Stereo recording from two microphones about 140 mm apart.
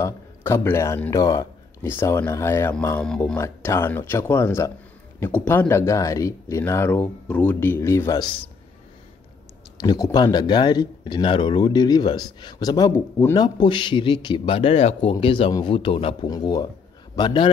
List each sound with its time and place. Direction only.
0.0 s a man's voice: 20° left (ahead or behind)
1.1 s speech: 30° left (ahead or behind)
1.8 s speech: 15° left (ahead or behind)
3.0 s speech: 5° left (ahead or behind)
3.3 s speech: 20° left (ahead or behind)
9.8 s speech: 30° left (ahead or behind)
13.4 s a man's voice: 35° left (ahead or behind)
16.3 s a man's voice: 30° left (ahead or behind)